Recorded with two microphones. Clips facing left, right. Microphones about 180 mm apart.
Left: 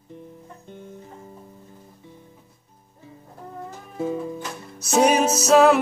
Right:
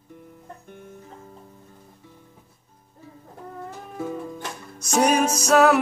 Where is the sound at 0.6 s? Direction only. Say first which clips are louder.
Left 2 dB; 20° left (ahead or behind).